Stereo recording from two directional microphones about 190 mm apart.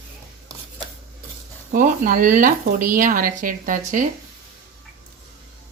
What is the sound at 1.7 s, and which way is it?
Speech, 45° right (ahead or behind).